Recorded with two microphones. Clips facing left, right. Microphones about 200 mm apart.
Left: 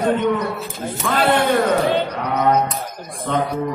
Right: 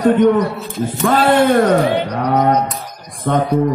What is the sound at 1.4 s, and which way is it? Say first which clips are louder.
Speech: right 5 dB; 50° right (ahead or behind).